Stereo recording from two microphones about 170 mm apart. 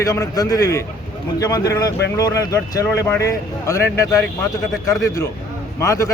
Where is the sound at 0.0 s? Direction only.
20° left (ahead or behind).